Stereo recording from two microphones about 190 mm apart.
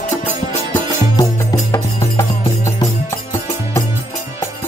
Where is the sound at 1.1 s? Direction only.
20° left (ahead or behind).